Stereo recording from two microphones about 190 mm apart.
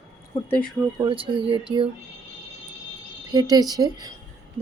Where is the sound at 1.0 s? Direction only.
25° right (ahead or behind).